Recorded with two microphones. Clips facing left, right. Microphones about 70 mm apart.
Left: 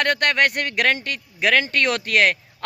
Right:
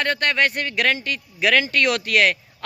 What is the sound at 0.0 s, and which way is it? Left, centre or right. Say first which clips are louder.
Speech: left 1 dB; left.